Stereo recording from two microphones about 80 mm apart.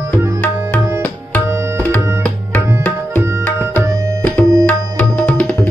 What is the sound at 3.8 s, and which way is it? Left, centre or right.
Tabla, centre.